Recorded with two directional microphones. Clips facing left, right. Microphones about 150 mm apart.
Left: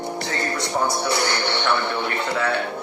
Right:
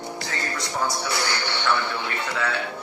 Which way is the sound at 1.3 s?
60° left (ahead or behind).